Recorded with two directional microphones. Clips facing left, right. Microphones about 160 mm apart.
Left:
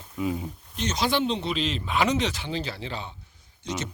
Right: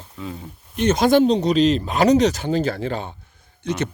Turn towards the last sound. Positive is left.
turn(degrees=-60)  # may be behind; listen again after turning